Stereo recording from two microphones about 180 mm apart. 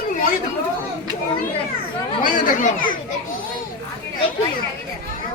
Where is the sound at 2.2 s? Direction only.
50° left (ahead or behind).